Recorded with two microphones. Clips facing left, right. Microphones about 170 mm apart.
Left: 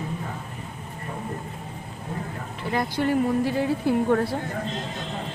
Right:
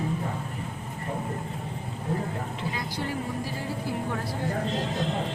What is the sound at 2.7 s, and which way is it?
Speech, 60° left (ahead or behind).